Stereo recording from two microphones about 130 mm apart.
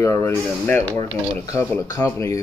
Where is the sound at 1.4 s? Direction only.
25° left (ahead or behind).